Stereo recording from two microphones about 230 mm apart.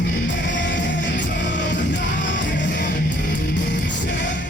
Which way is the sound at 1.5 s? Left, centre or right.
Left.